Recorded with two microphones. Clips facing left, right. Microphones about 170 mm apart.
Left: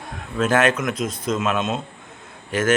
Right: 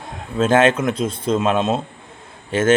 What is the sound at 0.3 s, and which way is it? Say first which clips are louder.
Speech: right 4 dB; 25° right (ahead or behind).